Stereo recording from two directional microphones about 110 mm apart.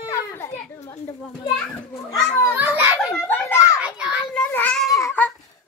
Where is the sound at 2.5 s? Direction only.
15° right (ahead or behind).